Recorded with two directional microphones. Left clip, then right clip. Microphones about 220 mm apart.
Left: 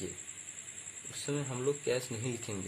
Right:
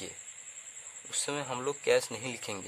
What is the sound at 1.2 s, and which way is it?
Speech, 35° right (ahead or behind).